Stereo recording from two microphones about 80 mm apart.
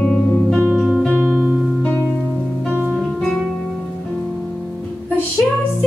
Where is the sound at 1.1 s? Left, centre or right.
Right.